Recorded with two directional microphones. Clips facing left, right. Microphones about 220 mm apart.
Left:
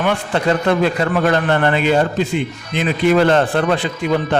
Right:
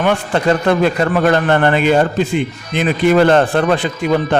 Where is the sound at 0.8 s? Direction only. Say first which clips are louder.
Right 2 dB; 50° right (ahead or behind).